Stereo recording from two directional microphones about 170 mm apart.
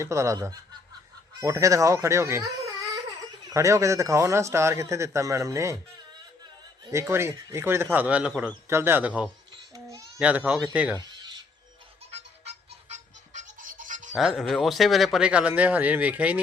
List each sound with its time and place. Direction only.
0.0 s a man's voice: 15° right (ahead or behind)
3.5 s a man's voice: 20° right (ahead or behind)
6.9 s a man's voice: 15° right (ahead or behind)
9.7 s baby cry: 20° right (ahead or behind)
10.2 s a man's voice: 5° right (ahead or behind)
11.0 s a sound: 25° right (ahead or behind)
12.9 s toothbrush: 50° right (ahead or behind)
14.2 s a man's voice: centre (ahead or behind)